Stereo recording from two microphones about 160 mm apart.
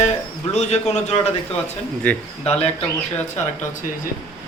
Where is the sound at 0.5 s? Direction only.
45° left (ahead or behind).